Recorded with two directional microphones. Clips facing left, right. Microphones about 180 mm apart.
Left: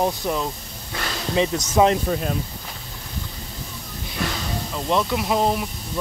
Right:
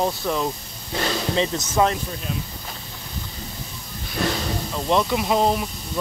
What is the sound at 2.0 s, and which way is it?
Speech, 55° left (ahead or behind).